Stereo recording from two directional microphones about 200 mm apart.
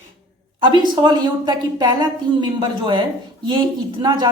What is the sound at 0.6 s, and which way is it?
Speech, 20° right (ahead or behind).